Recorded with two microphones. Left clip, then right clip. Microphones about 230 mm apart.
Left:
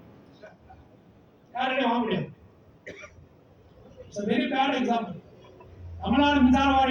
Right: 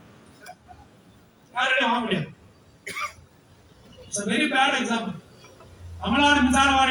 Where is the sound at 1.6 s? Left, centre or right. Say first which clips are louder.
Right 4 dB; left.